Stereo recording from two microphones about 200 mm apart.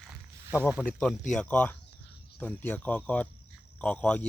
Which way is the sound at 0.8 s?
5° left (ahead or behind).